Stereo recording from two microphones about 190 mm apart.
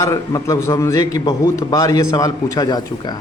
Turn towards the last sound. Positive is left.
turn(degrees=20)  # may be behind; listen again after turning